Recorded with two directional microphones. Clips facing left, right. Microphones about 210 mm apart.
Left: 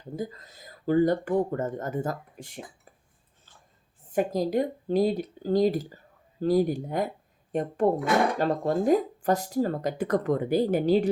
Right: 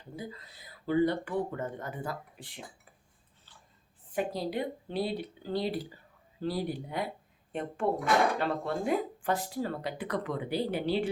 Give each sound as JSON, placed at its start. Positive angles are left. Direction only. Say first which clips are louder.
{"t": 0.2, "sound": "speech", "louder": "left 6 dB", "side_deg": 45}
{"t": 3.5, "sound": "a sound", "louder": "left 2 dB", "side_deg": 45}
{"t": 4.1, "sound": "speech", "louder": "left 7 dB", "side_deg": 45}